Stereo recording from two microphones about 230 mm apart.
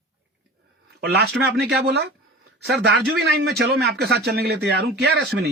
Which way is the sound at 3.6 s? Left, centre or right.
Right.